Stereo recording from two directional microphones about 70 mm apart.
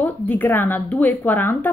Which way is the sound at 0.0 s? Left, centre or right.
Left.